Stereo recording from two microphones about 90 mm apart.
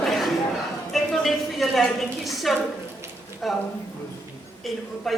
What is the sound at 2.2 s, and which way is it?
Speech, centre (ahead or behind).